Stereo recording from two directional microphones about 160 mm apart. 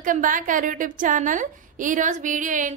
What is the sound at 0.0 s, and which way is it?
A woman's voice, 55° right (ahead or behind).